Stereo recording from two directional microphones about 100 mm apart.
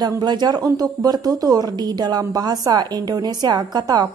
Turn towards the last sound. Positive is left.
turn(degrees=-40)  # may be behind; listen again after turning